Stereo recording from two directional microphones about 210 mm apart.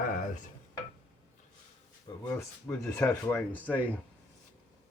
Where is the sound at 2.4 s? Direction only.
5° left (ahead or behind).